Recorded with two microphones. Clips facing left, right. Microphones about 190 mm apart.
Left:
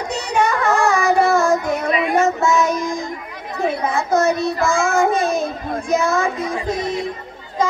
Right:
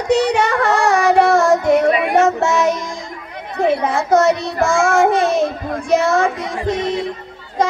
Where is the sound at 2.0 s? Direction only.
80° right.